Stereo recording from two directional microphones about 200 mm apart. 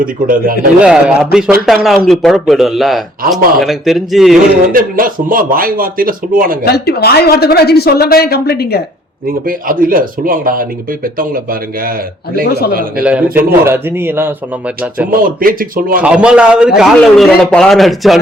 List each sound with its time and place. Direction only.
0.0 s speech: 45° right (ahead or behind)
0.8 s a man's voice: 5° right (ahead or behind)
4.7 s speech: 45° right (ahead or behind)
6.7 s speech: 50° left (ahead or behind)
9.5 s speech: 45° right (ahead or behind)
13.0 s a man's voice: 5° right (ahead or behind)
15.1 s speech: 45° right (ahead or behind)
16.0 s a man's voice: 5° right (ahead or behind)